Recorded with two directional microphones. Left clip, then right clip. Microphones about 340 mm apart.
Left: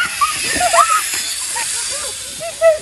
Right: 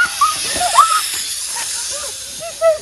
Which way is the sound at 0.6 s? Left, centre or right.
Centre.